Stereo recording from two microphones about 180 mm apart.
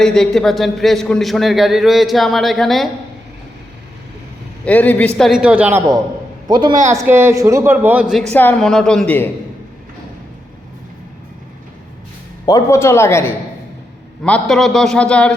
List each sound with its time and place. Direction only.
0.0 s a man's voice: 5° left (ahead or behind)
4.6 s a man's voice: 10° left (ahead or behind); by 5.8 s 5° right (ahead or behind)
6.5 s a man's voice: 25° right (ahead or behind)
6.9 s speech: 15° right (ahead or behind)
8.3 s a man's voice: 10° left (ahead or behind)
12.5 s a man's voice: 20° left (ahead or behind)